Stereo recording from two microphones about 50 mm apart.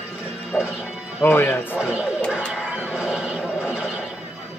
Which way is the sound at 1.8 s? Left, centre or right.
Centre.